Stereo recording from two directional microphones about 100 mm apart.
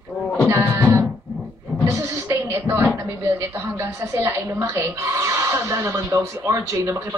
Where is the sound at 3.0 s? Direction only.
30° right (ahead or behind).